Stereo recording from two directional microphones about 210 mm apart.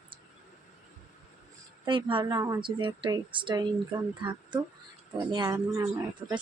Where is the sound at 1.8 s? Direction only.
25° right (ahead or behind).